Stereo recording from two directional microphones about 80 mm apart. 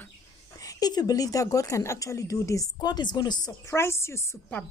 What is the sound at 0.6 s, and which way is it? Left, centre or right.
A woman's voice, left.